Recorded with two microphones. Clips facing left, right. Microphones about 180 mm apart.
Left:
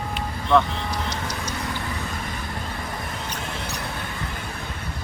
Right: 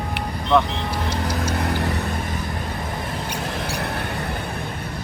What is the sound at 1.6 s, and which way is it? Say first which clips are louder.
Vehicle: right 7 dB; 60° right (ahead or behind).